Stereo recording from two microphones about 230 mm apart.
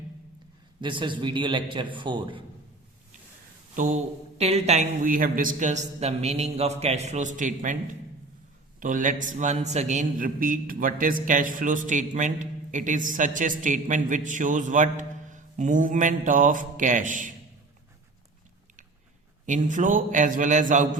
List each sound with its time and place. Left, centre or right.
0.8 s a man's voice: right
3.8 s a man's voice: right
8.8 s a man's voice: right
19.5 s a man's voice: right